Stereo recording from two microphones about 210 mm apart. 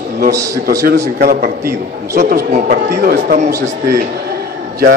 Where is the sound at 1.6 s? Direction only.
10° right (ahead or behind).